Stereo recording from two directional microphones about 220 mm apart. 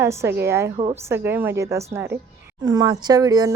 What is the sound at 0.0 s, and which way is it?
Speech, 10° right (ahead or behind).